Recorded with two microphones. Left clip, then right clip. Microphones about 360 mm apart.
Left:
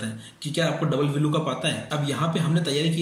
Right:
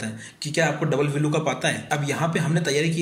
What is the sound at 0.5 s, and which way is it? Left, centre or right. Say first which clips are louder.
A man's voice: right 2 dB; centre.